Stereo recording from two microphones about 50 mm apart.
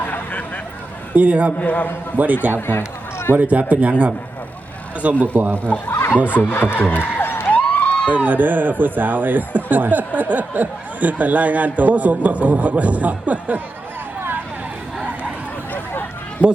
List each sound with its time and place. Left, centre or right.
0.0 s vehicle: left
1.1 s a man's voice: right
1.5 s speech: left
2.1 s speech: right
2.6 s speech: left
3.3 s speech: right
5.2 s speech: right
5.9 s snicker: left
6.3 s speech: left
6.9 s a sound: left
7.5 s a sound: left
8.1 s speech: right
16.4 s a man's voice: right